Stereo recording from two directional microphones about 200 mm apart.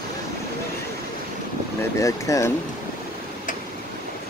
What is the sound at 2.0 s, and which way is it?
Speech, 15° left (ahead or behind).